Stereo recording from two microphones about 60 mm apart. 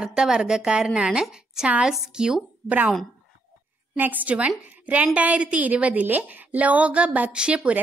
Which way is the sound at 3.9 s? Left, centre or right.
Right.